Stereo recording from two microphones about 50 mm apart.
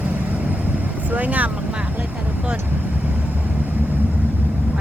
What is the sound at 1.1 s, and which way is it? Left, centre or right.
Speech, right.